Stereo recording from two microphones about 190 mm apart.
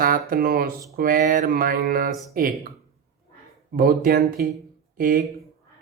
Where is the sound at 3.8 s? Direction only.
50° right (ahead or behind).